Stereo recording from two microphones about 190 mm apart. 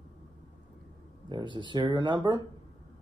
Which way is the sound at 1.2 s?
25° right (ahead or behind).